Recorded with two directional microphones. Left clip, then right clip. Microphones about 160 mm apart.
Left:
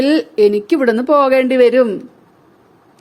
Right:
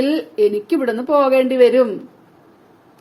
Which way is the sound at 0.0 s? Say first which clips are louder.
Left 4 dB; 45° left (ahead or behind).